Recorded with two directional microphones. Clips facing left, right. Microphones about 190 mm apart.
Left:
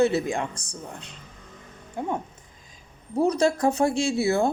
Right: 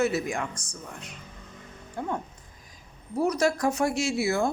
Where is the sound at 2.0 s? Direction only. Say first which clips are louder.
Left 3 dB; 20° left (ahead or behind).